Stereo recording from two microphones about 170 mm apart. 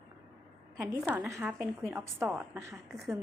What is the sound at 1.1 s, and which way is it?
A woman's voice, 10° right (ahead or behind).